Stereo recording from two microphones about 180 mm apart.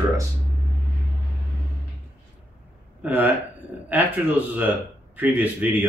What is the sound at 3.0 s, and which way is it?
Speech, 10° right (ahead or behind).